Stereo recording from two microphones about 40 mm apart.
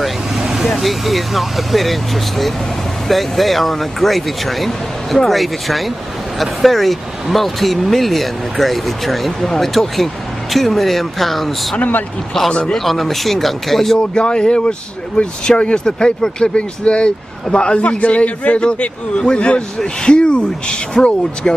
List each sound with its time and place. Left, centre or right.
0.0 s speech: centre
11.7 s a man's voice: left
12.7 s speech: centre
13.9 s a man's voice: left